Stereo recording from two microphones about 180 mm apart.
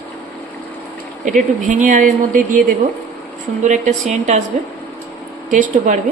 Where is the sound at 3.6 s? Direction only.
40° right (ahead or behind).